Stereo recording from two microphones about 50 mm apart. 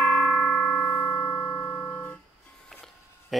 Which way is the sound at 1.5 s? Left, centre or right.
Left.